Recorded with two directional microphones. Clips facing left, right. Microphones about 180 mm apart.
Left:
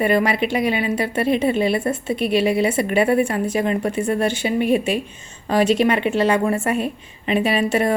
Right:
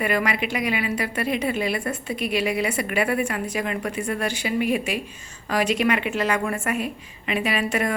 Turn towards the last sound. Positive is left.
turn(degrees=30)  # may be behind; listen again after turning